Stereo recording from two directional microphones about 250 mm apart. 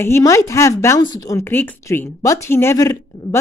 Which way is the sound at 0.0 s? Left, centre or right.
Centre.